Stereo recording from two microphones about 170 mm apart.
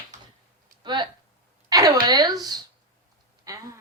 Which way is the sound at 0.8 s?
25° right (ahead or behind).